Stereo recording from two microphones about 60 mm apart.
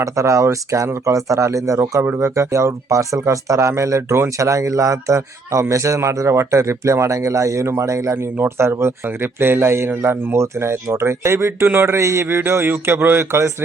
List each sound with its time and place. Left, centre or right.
0.0 s speech: right
8.4 s a man's voice: right
11.9 s speech: right